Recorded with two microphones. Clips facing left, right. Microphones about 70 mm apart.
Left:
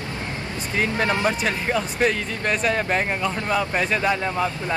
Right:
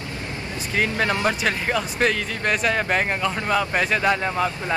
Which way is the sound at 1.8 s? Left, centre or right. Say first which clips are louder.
Even; centre.